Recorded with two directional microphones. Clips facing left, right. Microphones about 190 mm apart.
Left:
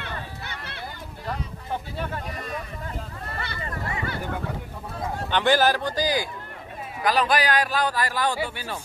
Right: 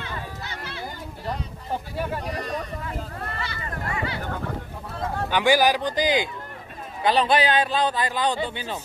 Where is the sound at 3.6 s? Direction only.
25° left (ahead or behind).